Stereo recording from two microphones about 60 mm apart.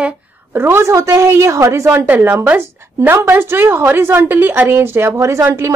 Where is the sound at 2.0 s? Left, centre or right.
Right.